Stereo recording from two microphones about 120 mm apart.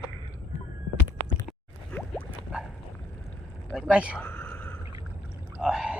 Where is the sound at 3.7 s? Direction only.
10° right (ahead or behind).